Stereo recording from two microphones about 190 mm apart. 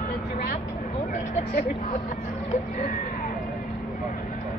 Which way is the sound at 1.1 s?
40° left (ahead or behind).